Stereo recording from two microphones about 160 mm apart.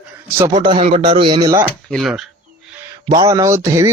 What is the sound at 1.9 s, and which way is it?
Speech, centre (ahead or behind).